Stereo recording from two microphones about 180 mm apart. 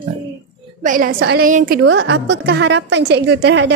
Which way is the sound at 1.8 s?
90° right.